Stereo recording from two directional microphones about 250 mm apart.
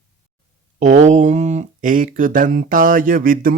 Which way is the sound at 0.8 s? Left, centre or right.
Right.